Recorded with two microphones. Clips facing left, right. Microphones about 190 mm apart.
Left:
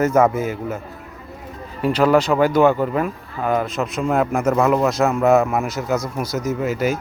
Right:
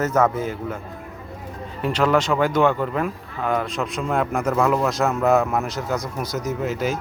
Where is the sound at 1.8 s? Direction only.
5° left (ahead or behind).